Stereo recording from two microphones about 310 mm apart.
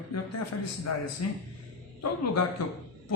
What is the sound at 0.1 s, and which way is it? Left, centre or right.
A man's voice, left.